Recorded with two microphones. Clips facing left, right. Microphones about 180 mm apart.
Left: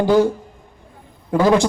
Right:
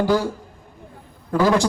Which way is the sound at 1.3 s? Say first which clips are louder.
Left 3 dB; 20° left (ahead or behind).